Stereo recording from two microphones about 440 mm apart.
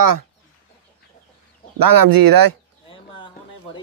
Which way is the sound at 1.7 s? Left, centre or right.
Right.